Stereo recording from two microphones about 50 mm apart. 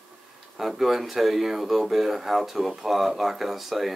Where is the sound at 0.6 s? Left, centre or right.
Centre.